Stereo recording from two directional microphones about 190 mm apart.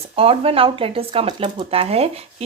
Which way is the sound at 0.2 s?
30° right (ahead or behind).